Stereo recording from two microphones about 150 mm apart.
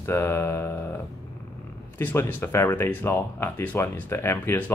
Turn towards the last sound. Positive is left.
turn(degrees=15)  # may be behind; listen again after turning